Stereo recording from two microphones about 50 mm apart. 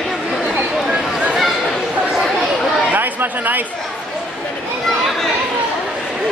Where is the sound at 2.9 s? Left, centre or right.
Right.